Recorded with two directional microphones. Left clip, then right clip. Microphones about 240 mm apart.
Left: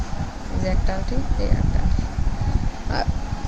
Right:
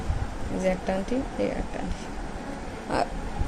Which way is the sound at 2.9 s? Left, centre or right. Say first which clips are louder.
Even; centre.